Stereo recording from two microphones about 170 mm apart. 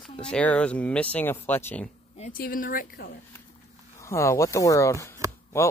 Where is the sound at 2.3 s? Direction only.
55° left (ahead or behind).